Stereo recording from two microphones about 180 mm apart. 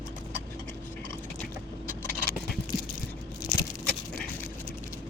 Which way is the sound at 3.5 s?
45° left (ahead or behind).